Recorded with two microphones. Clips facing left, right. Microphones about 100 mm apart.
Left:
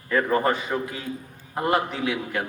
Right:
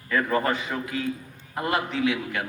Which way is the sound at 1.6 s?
35° left (ahead or behind).